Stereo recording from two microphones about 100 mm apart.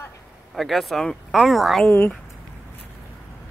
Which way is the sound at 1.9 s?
15° left (ahead or behind).